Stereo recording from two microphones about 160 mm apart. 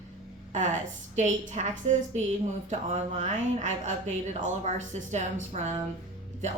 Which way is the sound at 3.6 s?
50° right (ahead or behind).